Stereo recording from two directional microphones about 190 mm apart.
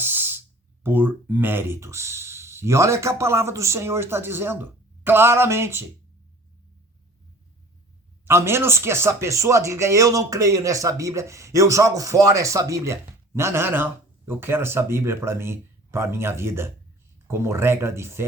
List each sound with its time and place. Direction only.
0.0 s a sound: 10° right (ahead or behind)
0.8 s speech: 10° right (ahead or behind)
8.2 s speech: 15° right (ahead or behind)